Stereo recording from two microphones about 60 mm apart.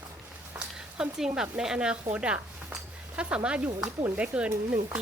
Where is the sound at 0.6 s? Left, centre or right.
Centre.